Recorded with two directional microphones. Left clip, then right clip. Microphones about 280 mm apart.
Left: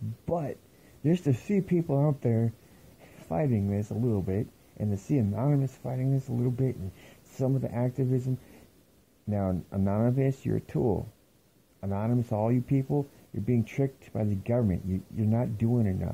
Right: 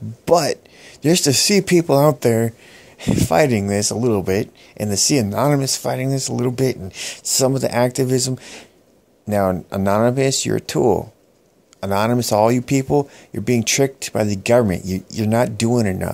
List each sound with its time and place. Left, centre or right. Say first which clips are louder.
0.2 s speech: right 17 dB; right
9.3 s speech: right 14 dB; centre